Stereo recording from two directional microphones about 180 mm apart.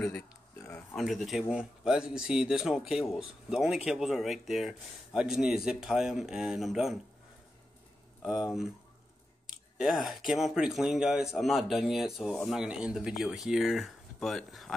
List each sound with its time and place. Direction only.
0.6 s speech: 10° left (ahead or behind)
8.2 s speech: 5° right (ahead or behind)
9.8 s speech: centre (ahead or behind)